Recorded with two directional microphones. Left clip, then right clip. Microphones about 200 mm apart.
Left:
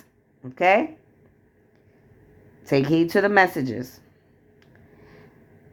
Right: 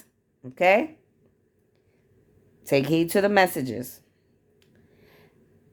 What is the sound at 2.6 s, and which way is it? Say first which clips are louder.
Speech: left 2 dB; 20° right (ahead or behind).